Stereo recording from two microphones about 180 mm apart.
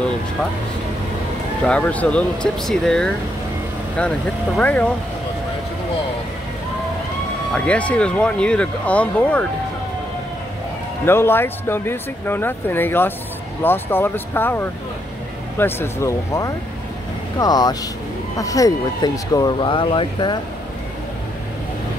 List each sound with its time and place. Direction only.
1.6 s speech: 5° left (ahead or behind)
4.6 s speech: 10° left (ahead or behind)
7.5 s speech: 5° left (ahead or behind)
11.1 s speech: 10° left (ahead or behind)